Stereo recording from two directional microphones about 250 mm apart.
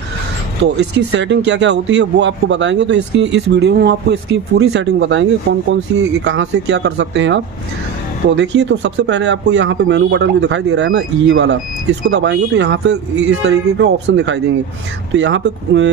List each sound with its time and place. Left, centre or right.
0.9 s speech: right